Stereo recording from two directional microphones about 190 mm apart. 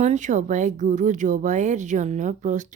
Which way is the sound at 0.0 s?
40° right (ahead or behind).